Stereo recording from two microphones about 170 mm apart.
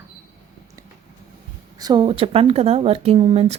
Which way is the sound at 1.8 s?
25° right (ahead or behind).